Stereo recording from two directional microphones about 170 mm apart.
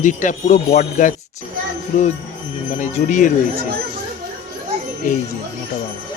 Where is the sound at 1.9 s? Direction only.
40° left (ahead or behind).